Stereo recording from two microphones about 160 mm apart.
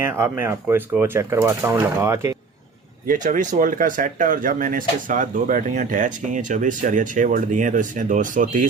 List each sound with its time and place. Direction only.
0.0 s speech: 15° right (ahead or behind)
3.1 s speech: 55° right (ahead or behind)